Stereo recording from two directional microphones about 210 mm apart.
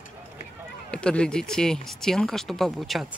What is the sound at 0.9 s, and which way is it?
Speech, 5° left (ahead or behind).